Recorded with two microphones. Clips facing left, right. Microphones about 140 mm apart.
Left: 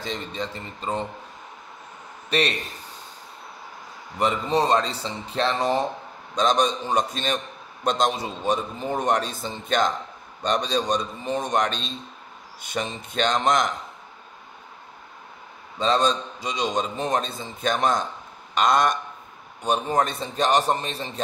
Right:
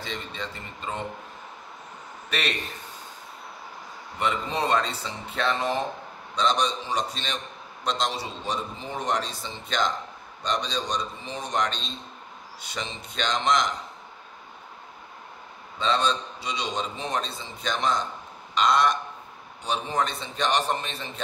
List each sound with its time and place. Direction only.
0.0 s a man's voice: 40° left (ahead or behind)
2.2 s a man's voice: 35° left (ahead or behind)
4.2 s a man's voice: 35° left (ahead or behind)
15.8 s a man's voice: 40° left (ahead or behind)